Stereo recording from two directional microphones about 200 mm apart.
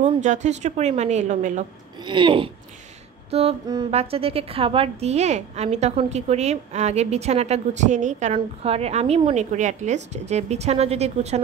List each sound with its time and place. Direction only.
0.2 s a woman's voice: 35° right (ahead or behind)
2.0 s a woman's voice: 25° right (ahead or behind)